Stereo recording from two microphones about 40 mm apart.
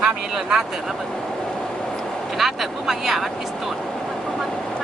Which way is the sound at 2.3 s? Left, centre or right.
Centre.